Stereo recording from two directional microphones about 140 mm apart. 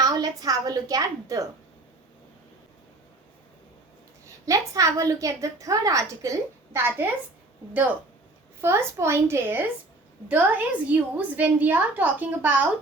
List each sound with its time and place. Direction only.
0.0 s a woman's voice: 25° right (ahead or behind)
4.4 s a woman's voice: 25° right (ahead or behind)
8.6 s a woman's voice: 20° right (ahead or behind)